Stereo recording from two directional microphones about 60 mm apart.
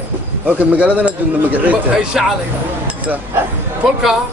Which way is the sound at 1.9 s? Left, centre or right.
Centre.